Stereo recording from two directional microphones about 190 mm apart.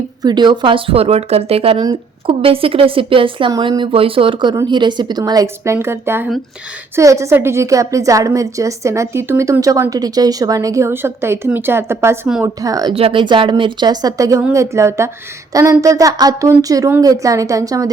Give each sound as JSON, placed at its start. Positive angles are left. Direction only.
{"t": 0.2, "sound": "a woman's voice", "side_deg": -20}